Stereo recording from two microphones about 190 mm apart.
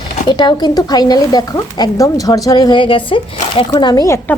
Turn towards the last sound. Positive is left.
turn(degrees=15)  # may be behind; listen again after turning